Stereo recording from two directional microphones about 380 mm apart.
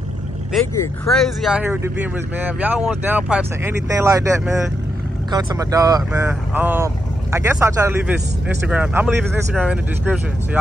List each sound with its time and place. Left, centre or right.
0.5 s speech: centre